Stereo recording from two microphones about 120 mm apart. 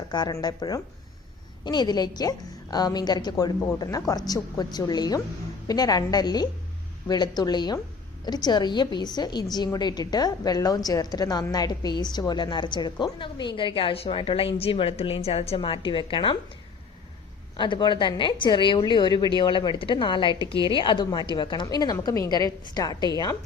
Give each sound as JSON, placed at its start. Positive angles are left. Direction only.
{"t": 0.1, "sound": "a woman's voice", "side_deg": 35}
{"t": 17.6, "sound": "a woman's voice", "side_deg": 40}